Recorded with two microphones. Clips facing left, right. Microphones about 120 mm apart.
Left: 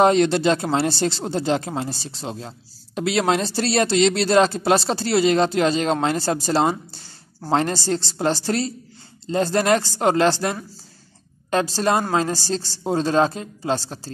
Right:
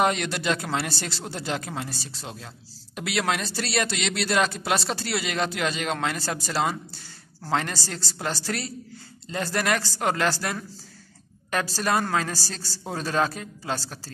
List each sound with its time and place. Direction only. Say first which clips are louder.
0.0 s speech: left 8 dB; 30° left (ahead or behind)